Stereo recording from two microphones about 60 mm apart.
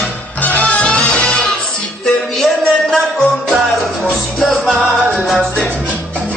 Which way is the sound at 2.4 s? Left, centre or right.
Centre.